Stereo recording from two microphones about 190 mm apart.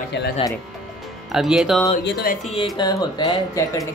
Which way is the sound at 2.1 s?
55° left (ahead or behind).